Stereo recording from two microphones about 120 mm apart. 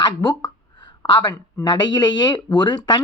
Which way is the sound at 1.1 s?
35° left (ahead or behind).